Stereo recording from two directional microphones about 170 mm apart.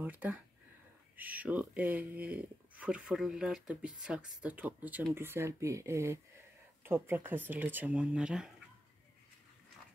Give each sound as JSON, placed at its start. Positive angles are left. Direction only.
{"t": 0.0, "sound": "speech", "side_deg": -10}